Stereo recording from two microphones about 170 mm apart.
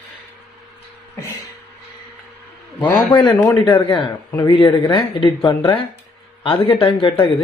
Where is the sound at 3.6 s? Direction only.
25° left (ahead or behind).